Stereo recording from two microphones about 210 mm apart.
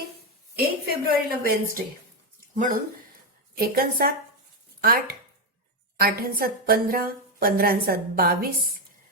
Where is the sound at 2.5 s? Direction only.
40° right (ahead or behind).